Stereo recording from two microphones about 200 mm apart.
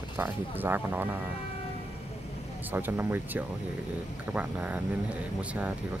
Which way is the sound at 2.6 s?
10° right (ahead or behind).